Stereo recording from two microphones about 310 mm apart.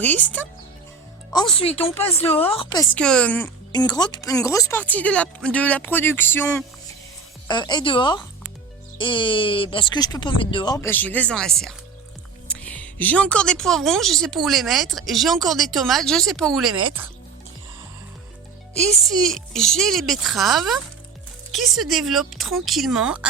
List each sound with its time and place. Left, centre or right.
0.0 s speech: centre
1.5 s speech: centre
18.7 s speech: centre